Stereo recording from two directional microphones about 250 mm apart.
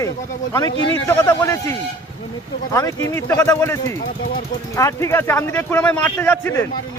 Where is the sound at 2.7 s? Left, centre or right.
Centre.